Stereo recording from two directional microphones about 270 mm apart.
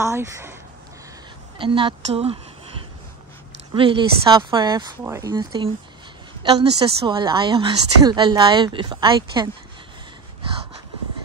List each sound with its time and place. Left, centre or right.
0.0 s a woman's voice: centre
1.6 s a woman's voice: centre
3.7 s a woman's voice: centre
6.8 s a woman's voice: centre